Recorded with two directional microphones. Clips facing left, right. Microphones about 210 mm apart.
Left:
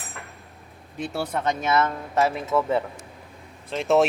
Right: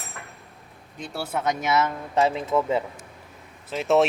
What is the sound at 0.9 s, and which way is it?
Speech, 5° left (ahead or behind).